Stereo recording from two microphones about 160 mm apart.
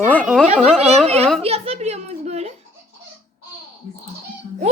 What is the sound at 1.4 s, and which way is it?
A woman's voice, 40° right (ahead or behind).